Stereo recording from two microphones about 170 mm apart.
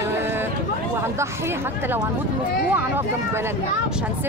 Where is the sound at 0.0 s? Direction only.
15° right (ahead or behind).